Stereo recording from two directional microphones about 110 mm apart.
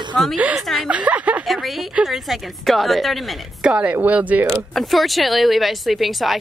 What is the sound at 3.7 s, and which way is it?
Speech, 15° right (ahead or behind).